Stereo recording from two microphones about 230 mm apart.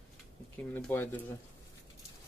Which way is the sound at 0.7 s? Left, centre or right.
Centre.